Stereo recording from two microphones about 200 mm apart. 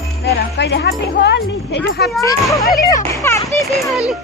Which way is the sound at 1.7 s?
55° left (ahead or behind).